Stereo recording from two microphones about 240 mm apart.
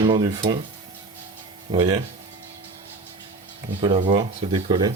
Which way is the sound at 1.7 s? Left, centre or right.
Centre.